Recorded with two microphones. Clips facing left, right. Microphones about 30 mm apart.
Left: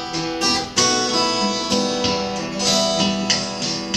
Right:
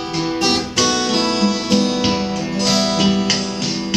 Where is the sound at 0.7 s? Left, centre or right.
Centre.